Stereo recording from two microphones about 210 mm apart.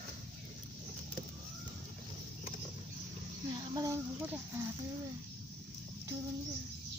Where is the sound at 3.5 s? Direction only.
15° right (ahead or behind).